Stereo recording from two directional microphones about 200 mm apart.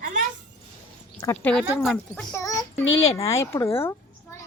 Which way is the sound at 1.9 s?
10° left (ahead or behind).